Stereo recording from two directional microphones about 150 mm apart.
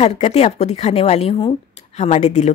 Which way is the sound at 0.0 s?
45° left (ahead or behind).